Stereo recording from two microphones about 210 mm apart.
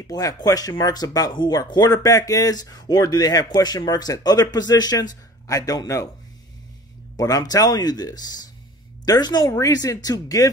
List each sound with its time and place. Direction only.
0.0 s speech: 15° left (ahead or behind)
7.2 s speech: 15° left (ahead or behind)